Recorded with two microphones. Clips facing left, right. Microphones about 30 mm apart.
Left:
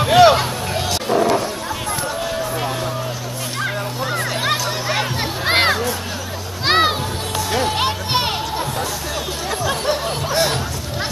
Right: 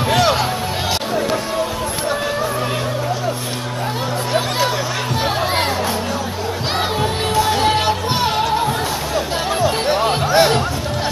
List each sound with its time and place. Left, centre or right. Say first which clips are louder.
0.0 s a sound: left 5 dB; centre
5.5 s music: left 3 dB; left
7.0 s music: right 6 dB; right
9.6 s music: right 4 dB; right